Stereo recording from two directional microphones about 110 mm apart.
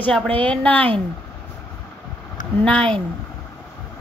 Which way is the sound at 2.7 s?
10° left (ahead or behind).